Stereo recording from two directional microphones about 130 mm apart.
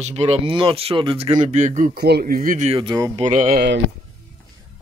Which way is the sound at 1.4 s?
70° right (ahead or behind).